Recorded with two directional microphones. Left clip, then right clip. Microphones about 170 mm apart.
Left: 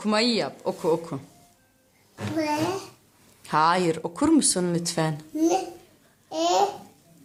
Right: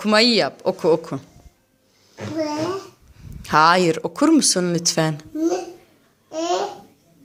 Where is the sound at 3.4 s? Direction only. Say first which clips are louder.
Right 7 dB; 15° right (ahead or behind).